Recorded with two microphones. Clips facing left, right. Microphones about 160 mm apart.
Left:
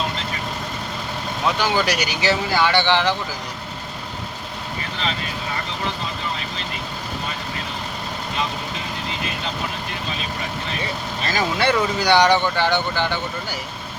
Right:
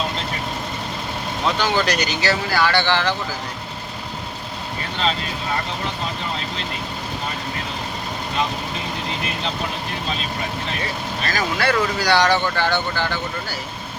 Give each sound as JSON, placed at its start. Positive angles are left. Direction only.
{"t": 1.5, "sound": "speech", "side_deg": 10}
{"t": 11.3, "sound": "speech", "side_deg": 25}